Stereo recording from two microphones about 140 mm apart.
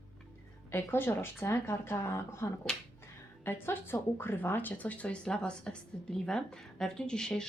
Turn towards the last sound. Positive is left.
turn(degrees=5)  # may be behind; listen again after turning